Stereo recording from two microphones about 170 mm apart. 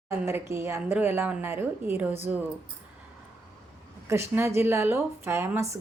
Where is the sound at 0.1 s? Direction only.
15° right (ahead or behind).